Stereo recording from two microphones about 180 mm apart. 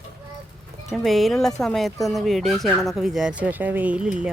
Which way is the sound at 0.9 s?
Centre (ahead or behind).